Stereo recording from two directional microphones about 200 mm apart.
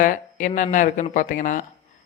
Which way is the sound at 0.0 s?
40° left (ahead or behind).